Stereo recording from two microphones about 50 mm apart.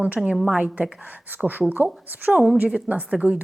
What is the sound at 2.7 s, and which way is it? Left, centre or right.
Speech, right.